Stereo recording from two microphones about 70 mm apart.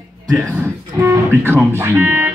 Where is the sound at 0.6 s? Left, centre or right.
Right.